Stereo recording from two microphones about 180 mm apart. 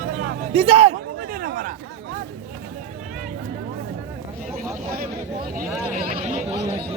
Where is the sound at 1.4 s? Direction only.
50° right (ahead or behind).